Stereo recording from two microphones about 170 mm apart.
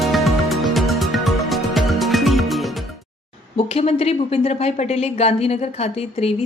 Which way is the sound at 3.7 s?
35° left (ahead or behind).